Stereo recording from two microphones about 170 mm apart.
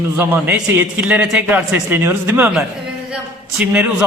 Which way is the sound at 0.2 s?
10° right (ahead or behind).